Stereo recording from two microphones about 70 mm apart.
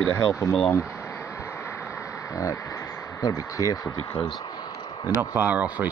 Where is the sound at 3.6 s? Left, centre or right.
Right.